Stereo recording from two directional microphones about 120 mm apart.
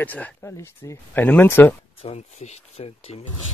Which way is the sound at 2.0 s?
65° left (ahead or behind).